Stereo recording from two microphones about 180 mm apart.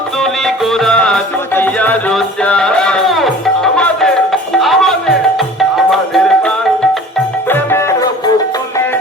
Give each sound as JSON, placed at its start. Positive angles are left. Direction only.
{"t": 0.2, "sound": "music", "side_deg": 0}
{"t": 7.5, "sound": "music", "side_deg": 15}